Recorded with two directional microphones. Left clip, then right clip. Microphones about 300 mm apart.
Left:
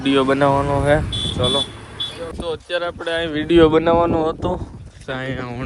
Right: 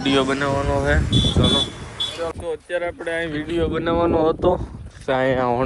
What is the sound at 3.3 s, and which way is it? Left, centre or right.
Speech, left.